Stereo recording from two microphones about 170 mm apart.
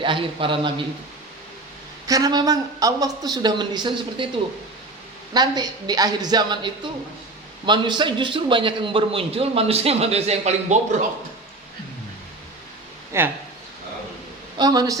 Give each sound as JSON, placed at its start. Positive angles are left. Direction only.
{"t": 0.0, "sound": "speech", "side_deg": -30}
{"t": 2.0, "sound": "speech", "side_deg": -20}
{"t": 5.3, "sound": "a man's voice", "side_deg": -25}
{"t": 13.1, "sound": "speech", "side_deg": -15}
{"t": 14.6, "sound": "speech", "side_deg": -20}